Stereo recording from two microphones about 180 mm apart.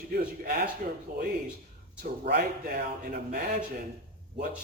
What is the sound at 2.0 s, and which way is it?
Speech, 60° right (ahead or behind).